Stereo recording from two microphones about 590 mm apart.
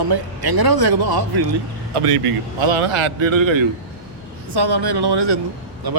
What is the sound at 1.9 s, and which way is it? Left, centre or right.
A man's voice, right.